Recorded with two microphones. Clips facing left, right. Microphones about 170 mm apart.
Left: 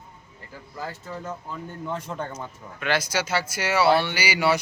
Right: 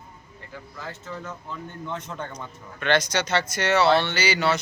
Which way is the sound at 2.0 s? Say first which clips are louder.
Left 2 dB; 5° left (ahead or behind).